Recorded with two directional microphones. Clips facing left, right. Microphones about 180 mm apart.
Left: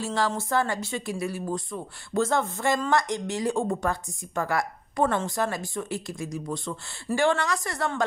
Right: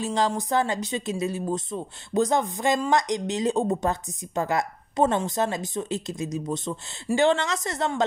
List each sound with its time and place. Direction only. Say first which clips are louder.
0.0 s speech: right 2 dB; 20° right (ahead or behind)